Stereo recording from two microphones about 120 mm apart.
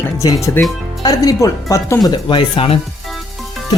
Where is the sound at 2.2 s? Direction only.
40° left (ahead or behind).